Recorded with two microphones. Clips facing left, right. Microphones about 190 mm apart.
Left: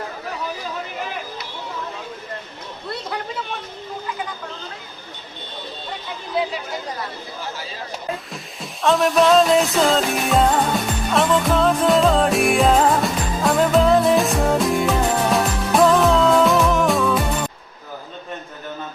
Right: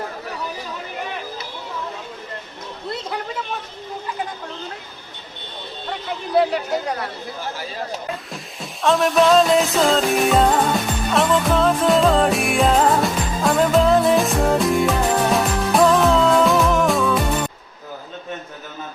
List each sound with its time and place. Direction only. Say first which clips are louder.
6.3 s speech: right 6 dB; 65° right (ahead or behind)
8.3 s music: right 1 dB; centre (ahead or behind)